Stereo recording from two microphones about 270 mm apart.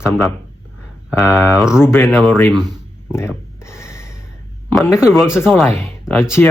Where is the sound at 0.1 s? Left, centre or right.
Centre.